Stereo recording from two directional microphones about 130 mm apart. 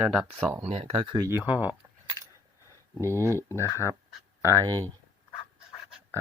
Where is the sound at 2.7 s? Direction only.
20° left (ahead or behind).